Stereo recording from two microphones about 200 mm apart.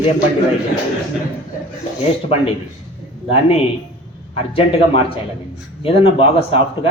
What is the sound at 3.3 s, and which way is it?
A man's voice, 30° left (ahead or behind).